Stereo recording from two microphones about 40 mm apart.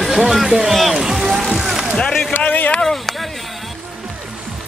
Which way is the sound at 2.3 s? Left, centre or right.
Left.